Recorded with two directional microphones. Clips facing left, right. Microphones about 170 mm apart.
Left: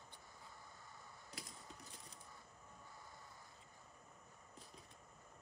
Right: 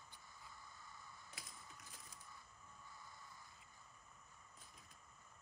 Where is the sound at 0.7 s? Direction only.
35° left (ahead or behind).